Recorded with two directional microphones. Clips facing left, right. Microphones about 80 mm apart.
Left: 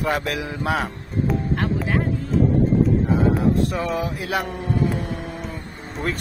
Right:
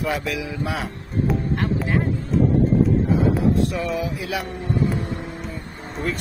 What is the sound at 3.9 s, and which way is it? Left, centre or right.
Speech, left.